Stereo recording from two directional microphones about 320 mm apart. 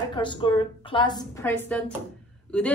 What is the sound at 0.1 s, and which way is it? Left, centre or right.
A woman's voice, centre.